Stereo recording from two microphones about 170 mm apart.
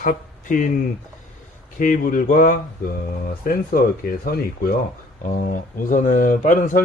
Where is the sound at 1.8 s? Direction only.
55° left (ahead or behind).